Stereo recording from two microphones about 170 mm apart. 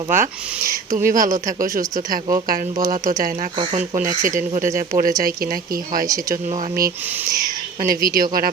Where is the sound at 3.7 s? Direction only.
50° right (ahead or behind).